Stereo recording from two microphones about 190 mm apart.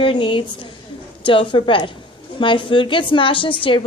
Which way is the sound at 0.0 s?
25° left (ahead or behind).